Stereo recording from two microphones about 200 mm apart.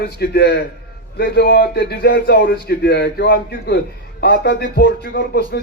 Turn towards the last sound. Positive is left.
turn(degrees=55)  # may be behind; listen again after turning